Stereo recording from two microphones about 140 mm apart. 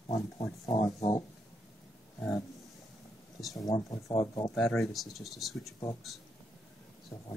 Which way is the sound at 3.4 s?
Centre (ahead or behind).